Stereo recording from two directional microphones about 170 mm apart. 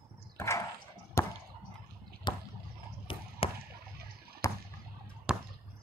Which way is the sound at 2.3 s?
25° left (ahead or behind).